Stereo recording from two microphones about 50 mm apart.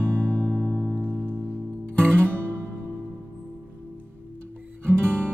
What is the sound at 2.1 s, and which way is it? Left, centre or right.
Guitar, right.